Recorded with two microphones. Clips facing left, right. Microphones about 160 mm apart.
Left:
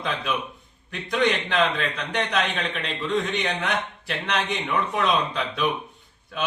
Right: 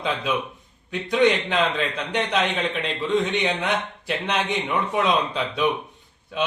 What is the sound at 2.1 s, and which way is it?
A man's voice, 20° right (ahead or behind).